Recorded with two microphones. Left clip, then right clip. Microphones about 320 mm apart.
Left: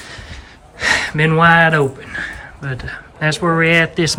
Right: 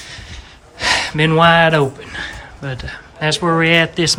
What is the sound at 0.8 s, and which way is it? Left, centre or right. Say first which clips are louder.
Speech: even; centre.